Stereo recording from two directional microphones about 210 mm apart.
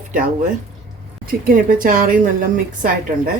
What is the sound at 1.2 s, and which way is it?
Speech, 40° right (ahead or behind).